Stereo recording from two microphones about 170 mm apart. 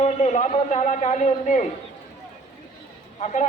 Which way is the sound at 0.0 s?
40° left (ahead or behind).